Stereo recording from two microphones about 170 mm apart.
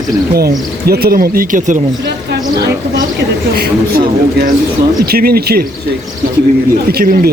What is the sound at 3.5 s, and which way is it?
Speech, 65° right (ahead or behind).